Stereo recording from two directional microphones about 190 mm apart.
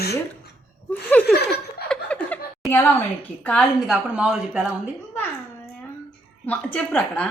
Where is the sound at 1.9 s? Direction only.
5° left (ahead or behind).